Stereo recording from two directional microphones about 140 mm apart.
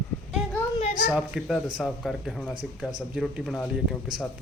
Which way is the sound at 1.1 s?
5° right (ahead or behind).